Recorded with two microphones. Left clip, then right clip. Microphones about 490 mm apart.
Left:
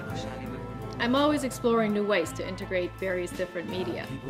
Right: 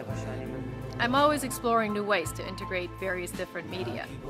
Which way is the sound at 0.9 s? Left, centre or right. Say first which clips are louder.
Right 1 dB; right.